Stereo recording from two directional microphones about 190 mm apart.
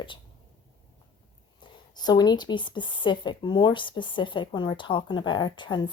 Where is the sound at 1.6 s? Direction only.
20° left (ahead or behind).